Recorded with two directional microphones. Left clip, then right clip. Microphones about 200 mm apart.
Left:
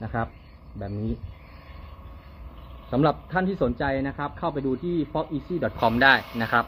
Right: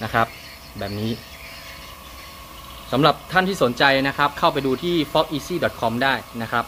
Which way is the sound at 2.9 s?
10° right (ahead or behind).